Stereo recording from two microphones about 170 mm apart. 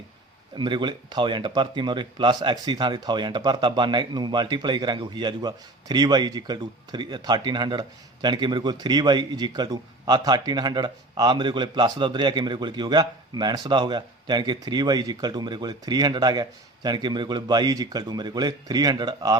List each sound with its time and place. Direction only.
0.5 s speech: 25° right (ahead or behind)